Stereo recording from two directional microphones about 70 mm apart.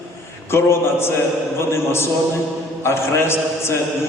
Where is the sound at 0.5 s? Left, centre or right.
Left.